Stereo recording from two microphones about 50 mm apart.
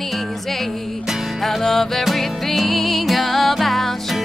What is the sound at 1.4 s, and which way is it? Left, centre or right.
Music, centre.